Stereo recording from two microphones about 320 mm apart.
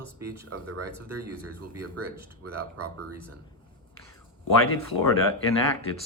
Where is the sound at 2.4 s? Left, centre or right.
Right.